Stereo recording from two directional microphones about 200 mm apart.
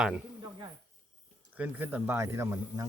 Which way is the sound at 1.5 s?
10° right (ahead or behind).